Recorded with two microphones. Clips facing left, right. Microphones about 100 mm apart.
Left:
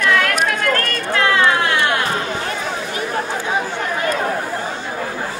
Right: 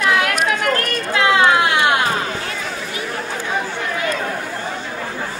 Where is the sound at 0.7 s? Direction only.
15° right (ahead or behind).